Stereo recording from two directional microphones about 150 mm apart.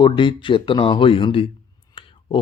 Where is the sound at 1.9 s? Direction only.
35° left (ahead or behind).